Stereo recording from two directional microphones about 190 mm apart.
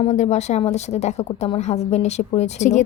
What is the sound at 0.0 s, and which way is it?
Speech, 35° left (ahead or behind).